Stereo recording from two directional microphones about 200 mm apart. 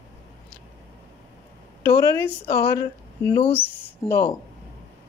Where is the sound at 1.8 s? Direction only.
15° left (ahead or behind).